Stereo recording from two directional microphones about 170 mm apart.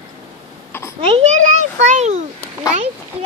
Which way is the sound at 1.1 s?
40° right (ahead or behind).